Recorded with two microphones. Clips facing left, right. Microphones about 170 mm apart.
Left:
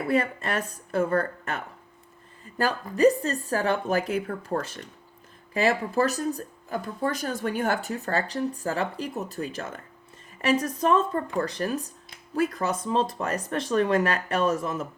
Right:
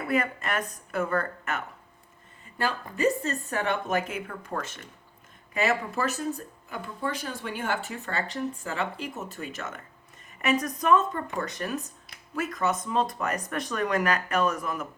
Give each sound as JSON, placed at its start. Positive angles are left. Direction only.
{"t": 0.1, "sound": "speech", "side_deg": 30}